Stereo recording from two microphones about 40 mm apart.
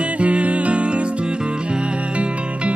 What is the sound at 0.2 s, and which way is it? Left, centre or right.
Music, right.